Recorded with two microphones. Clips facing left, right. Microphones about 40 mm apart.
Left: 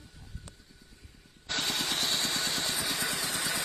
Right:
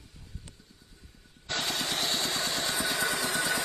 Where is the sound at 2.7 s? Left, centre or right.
Right.